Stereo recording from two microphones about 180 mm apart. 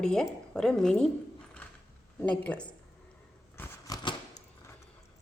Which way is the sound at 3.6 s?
20° left (ahead or behind).